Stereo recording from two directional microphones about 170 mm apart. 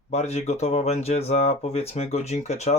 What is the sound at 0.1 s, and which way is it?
Speech, 40° left (ahead or behind).